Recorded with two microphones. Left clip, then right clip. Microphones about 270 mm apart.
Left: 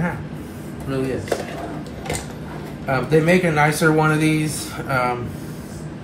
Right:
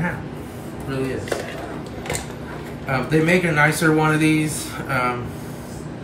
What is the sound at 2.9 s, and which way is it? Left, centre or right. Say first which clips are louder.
A man's voice: left 2 dB; centre.